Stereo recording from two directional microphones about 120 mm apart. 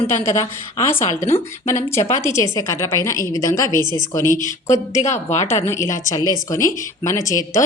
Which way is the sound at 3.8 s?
35° right (ahead or behind).